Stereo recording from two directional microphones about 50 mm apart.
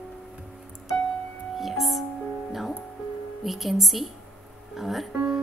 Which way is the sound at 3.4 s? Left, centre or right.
Centre.